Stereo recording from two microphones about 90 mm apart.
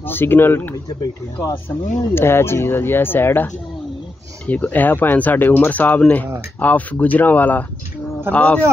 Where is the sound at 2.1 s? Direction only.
25° left (ahead or behind).